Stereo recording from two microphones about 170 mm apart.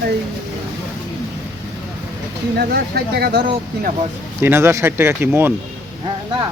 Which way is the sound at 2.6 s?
75° right (ahead or behind).